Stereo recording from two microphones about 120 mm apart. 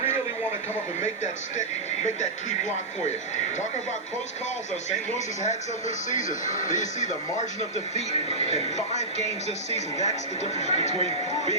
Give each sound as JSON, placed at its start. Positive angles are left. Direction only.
{"t": 5.1, "sound": "speech", "side_deg": 80}
{"t": 9.7, "sound": "speech", "side_deg": 70}
{"t": 10.9, "sound": "speech", "side_deg": -55}